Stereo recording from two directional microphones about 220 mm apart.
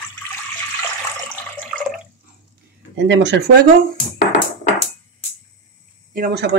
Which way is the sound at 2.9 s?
55° right (ahead or behind).